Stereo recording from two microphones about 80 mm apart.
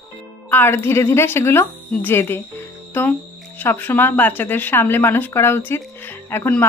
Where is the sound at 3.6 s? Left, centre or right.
Left.